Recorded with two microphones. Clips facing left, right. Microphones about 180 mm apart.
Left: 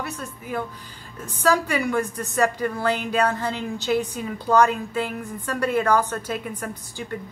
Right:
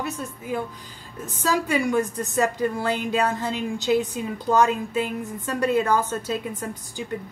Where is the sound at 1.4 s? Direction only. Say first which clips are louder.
Left 1 dB; 20° right (ahead or behind).